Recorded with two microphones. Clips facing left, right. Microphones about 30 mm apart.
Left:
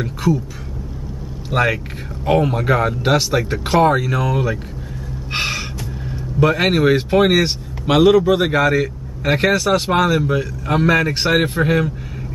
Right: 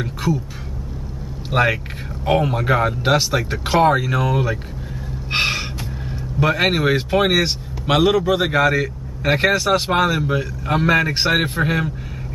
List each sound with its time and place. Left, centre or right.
0.0 s speech: centre
1.5 s speech: centre
5.3 s gasp: centre
6.4 s speech: centre